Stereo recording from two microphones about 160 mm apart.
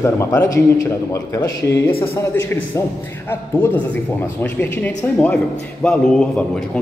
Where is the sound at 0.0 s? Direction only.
15° left (ahead or behind).